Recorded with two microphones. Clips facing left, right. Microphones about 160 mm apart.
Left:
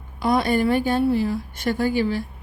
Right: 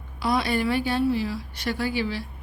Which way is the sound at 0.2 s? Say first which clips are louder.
Left 4 dB; 50° left (ahead or behind).